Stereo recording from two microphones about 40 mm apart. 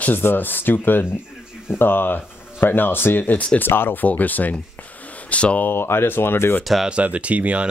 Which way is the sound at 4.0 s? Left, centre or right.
Left.